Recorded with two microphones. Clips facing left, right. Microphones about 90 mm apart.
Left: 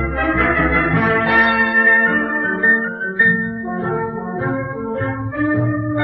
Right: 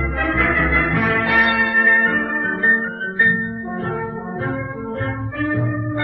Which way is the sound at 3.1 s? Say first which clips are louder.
Left 1 dB; 20° left (ahead or behind).